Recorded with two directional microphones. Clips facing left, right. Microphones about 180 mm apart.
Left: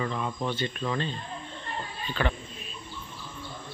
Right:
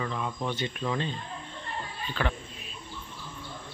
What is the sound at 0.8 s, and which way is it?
Speech, 5° right (ahead or behind).